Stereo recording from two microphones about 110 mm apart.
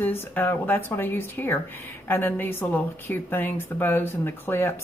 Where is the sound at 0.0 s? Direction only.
20° left (ahead or behind).